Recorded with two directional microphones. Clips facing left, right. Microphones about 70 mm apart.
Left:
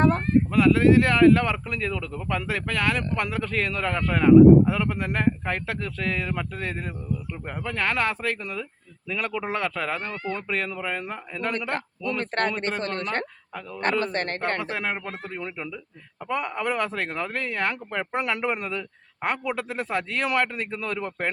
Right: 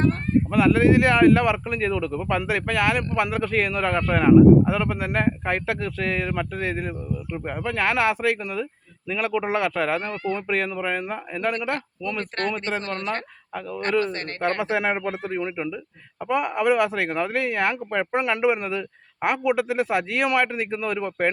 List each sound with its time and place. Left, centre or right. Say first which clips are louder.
0.5 s speech: even; centre
12.2 s a man's voice: left 2 dB; left
14.0 s a man's voice: right 2 dB; left
14.6 s speech: right 6 dB; centre